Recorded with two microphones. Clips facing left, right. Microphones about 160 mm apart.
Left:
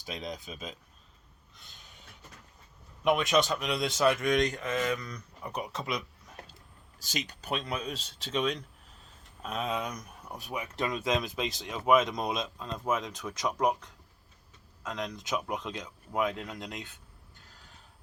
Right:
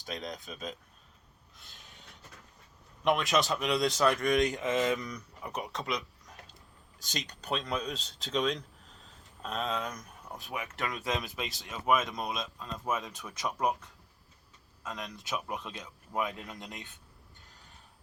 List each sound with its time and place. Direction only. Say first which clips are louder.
0.0 s speech: left 1 dB; centre (ahead or behind)
1.5 s a sound: even; centre (ahead or behind)
3.0 s speech: left 2 dB; centre (ahead or behind)
4.5 s mantra: right 2 dB; 20° right (ahead or behind)
5.4 s speech: left 2 dB; centre (ahead or behind)
9.6 s speech: left 1 dB; 15° left (ahead or behind)
14.9 s speech: left 5 dB; 20° left (ahead or behind)
16.4 s speech: left 4 dB; 10° right (ahead or behind)